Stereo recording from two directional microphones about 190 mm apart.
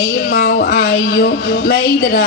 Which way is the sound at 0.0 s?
50° left (ahead or behind).